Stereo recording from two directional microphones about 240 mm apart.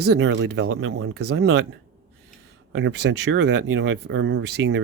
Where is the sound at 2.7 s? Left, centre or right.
Right.